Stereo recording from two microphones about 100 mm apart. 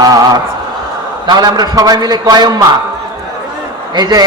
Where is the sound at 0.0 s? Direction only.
40° right (ahead or behind).